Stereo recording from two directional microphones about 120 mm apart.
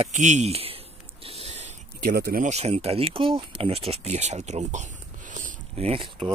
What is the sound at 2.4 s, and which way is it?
Speech, 65° right (ahead or behind).